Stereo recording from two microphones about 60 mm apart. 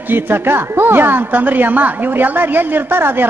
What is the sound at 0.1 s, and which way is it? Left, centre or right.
A woman's voice, right.